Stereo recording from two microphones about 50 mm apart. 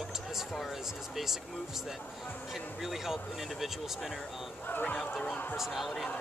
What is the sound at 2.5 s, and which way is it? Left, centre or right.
Speech, centre.